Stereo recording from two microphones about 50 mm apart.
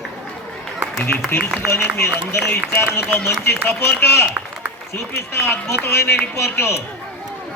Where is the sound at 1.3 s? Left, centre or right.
Left.